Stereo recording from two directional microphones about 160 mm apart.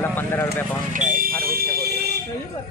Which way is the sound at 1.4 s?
70° right (ahead or behind).